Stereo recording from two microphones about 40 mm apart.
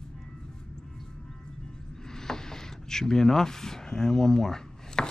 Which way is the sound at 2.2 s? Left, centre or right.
Centre.